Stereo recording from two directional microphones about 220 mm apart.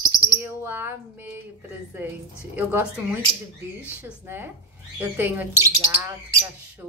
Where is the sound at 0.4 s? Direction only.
10° right (ahead or behind).